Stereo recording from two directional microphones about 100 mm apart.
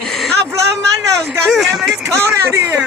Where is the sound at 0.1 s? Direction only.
5° left (ahead or behind).